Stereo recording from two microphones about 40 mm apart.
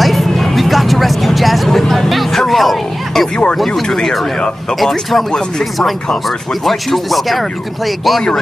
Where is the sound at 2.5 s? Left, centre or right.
Centre.